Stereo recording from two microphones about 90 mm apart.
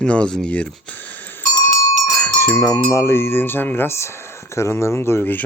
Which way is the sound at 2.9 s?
30° left (ahead or behind).